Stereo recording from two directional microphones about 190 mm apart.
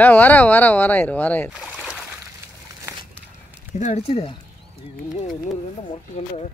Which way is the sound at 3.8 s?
35° left (ahead or behind).